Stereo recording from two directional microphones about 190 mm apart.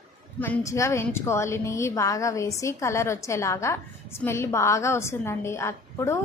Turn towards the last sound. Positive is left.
turn(degrees=15)  # may be behind; listen again after turning